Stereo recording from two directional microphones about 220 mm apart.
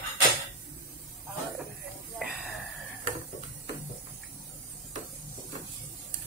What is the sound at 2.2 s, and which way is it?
Wheeze, centre (ahead or behind).